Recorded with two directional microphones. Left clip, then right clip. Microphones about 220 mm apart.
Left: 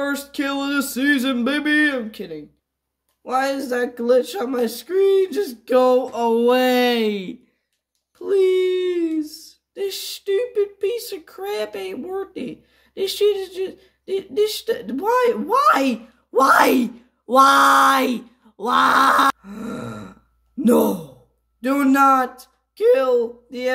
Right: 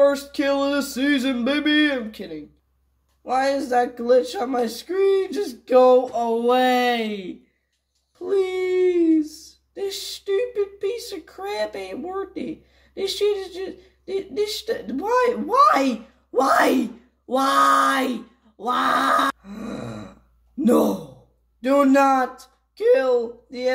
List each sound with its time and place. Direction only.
0.0 s speech: 35° left (ahead or behind)
6.3 s a sound: 50° left (ahead or behind)
8.3 s speech: 30° left (ahead or behind)
19.5 s grunt: 35° left (ahead or behind)
20.6 s speech: 30° left (ahead or behind)